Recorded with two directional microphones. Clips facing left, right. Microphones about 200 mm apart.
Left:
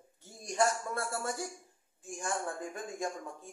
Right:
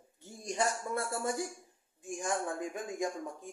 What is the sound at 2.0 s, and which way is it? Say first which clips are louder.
Speech: right 2 dB; 15° right (ahead or behind).